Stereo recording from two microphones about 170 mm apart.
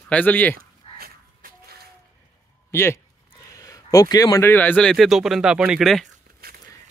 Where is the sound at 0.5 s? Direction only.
60° right (ahead or behind).